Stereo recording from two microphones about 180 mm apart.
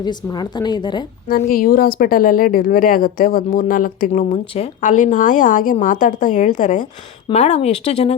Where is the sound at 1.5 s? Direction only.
55° left (ahead or behind).